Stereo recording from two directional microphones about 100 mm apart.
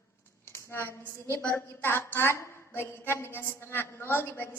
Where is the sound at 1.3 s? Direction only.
20° left (ahead or behind).